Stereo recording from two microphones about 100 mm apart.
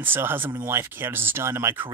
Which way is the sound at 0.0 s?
20° right (ahead or behind).